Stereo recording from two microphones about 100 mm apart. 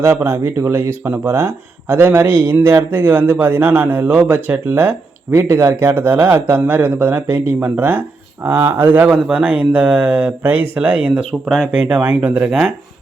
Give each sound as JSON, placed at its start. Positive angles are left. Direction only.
{"t": 0.0, "sound": "speech", "side_deg": -25}
{"t": 11.4, "sound": "speech", "side_deg": 0}
{"t": 11.7, "sound": "speech", "side_deg": -15}